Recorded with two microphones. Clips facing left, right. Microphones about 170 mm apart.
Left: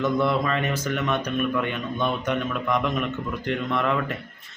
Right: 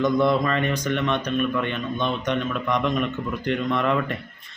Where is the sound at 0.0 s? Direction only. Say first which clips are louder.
Right 3 dB; 5° left (ahead or behind).